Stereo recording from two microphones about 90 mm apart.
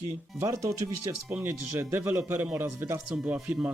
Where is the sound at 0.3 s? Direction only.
35° right (ahead or behind).